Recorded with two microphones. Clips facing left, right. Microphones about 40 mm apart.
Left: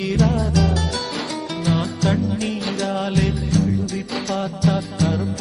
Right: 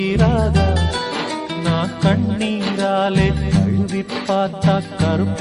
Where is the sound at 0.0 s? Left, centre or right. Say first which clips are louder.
Right 3 dB; right.